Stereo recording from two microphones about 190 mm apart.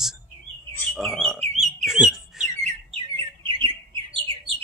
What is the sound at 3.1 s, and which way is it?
Bird, 25° right (ahead or behind).